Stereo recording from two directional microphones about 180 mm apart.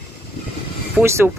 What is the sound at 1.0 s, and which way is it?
Speech, 15° right (ahead or behind).